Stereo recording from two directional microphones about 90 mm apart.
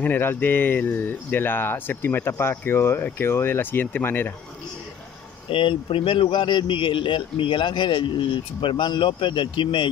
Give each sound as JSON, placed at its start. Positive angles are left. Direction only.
{"t": 0.0, "sound": "speech", "side_deg": 25}
{"t": 5.5, "sound": "a man's voice", "side_deg": 70}